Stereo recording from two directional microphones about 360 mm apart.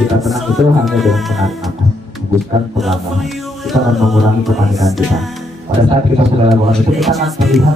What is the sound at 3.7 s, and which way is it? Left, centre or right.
Music, centre.